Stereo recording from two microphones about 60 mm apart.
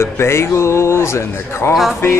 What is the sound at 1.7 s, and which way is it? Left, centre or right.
Speech, centre.